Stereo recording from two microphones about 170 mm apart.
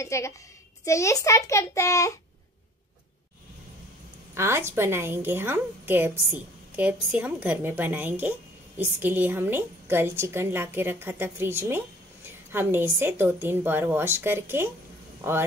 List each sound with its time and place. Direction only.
0.0 s a child's voice: 15° left (ahead or behind)
4.4 s a woman's voice: 15° right (ahead or behind)